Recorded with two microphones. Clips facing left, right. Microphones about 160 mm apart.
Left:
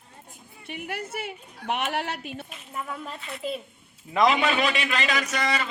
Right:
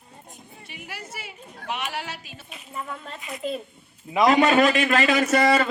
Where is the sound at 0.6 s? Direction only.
55° left (ahead or behind).